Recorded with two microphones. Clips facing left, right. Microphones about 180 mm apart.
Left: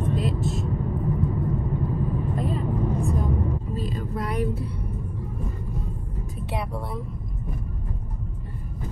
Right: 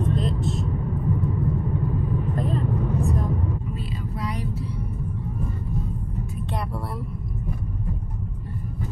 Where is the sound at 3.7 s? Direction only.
45° left (ahead or behind).